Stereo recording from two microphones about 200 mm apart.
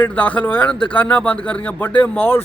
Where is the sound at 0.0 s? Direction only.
10° left (ahead or behind).